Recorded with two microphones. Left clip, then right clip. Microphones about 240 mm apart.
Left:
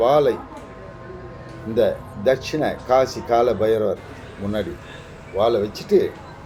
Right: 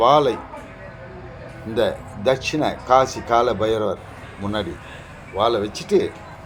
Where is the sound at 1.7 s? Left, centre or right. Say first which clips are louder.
Left 2 dB; right.